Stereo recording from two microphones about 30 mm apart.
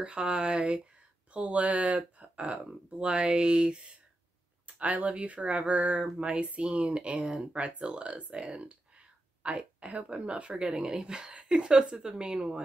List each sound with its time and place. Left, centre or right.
0.0 s speech: right
2.1 s speech: right
4.7 s speech: right
5.0 s speech: right
5.9 s a woman's voice: right
6.2 s speech: right
7.2 s speech: centre
7.8 s speech: right
10.6 s a woman's voice: right